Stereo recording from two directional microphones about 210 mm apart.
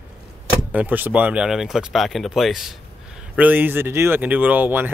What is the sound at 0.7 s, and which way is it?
Speech, 10° right (ahead or behind).